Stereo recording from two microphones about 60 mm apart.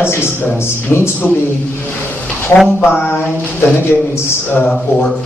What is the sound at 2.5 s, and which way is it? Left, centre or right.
A man's voice, left.